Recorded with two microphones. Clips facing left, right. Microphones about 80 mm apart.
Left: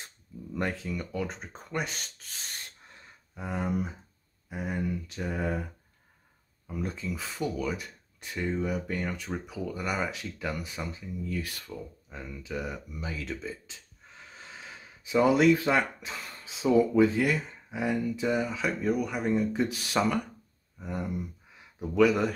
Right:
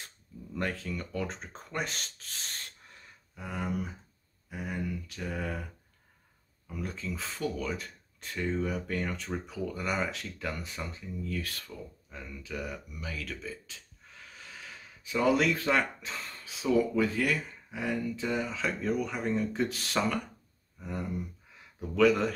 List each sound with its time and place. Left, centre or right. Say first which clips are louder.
0.6 s speech: left 2 dB; centre
3.3 s speech: left 3 dB; left
6.7 s speech: left 3 dB; left